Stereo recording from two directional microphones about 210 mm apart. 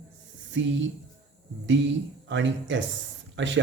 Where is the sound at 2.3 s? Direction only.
60° right (ahead or behind).